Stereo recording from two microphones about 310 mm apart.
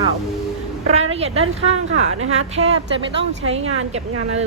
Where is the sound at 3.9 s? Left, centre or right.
Right.